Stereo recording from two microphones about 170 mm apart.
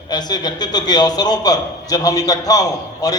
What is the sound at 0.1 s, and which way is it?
A man's voice, 25° left (ahead or behind).